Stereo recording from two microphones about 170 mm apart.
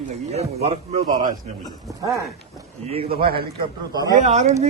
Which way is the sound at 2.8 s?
35° right (ahead or behind).